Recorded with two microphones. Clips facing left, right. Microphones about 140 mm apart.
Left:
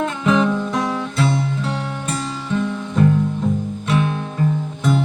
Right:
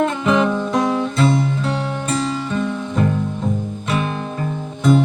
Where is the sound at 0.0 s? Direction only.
Centre (ahead or behind).